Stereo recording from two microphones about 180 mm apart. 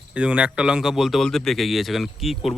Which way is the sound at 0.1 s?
5° right (ahead or behind).